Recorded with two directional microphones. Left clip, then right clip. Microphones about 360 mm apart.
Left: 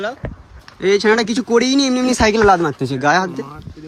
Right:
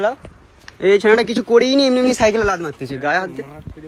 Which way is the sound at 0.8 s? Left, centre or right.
Centre.